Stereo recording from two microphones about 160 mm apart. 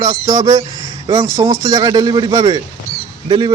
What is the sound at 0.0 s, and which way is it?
Speech, 25° right (ahead or behind).